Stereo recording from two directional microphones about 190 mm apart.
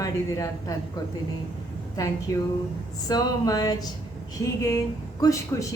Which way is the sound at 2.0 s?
20° left (ahead or behind).